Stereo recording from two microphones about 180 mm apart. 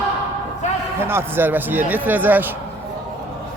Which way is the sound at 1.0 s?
15° right (ahead or behind).